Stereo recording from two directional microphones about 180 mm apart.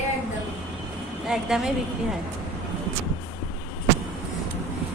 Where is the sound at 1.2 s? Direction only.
Centre (ahead or behind).